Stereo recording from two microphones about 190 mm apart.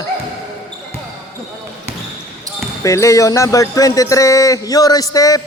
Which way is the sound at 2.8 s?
15° left (ahead or behind).